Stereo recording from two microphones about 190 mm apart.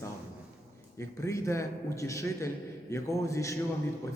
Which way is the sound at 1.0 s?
15° left (ahead or behind).